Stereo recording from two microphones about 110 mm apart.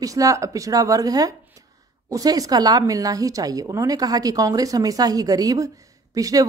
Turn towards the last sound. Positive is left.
turn(degrees=-35)  # may be behind; listen again after turning